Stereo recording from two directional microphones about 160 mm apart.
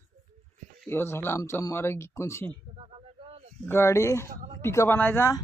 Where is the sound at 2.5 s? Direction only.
35° right (ahead or behind).